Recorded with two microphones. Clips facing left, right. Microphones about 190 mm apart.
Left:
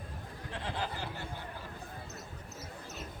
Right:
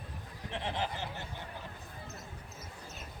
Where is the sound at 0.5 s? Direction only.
20° right (ahead or behind).